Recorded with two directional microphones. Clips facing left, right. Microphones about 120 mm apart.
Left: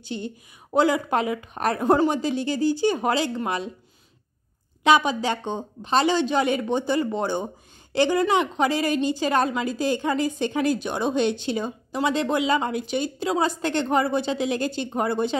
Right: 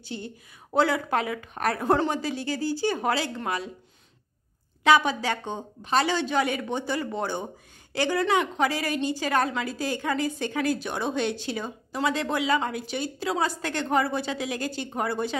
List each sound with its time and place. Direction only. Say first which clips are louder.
0.0 s a woman's voice: left 5 dB; 20° left (ahead or behind)
4.8 s a woman's voice: left 2 dB; 20° left (ahead or behind)